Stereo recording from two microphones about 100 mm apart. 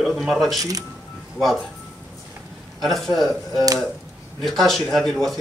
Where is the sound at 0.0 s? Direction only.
Centre (ahead or behind).